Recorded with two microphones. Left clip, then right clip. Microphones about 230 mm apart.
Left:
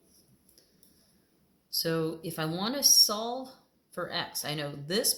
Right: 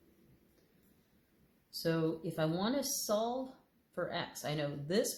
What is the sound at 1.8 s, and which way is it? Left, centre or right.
Speech, left.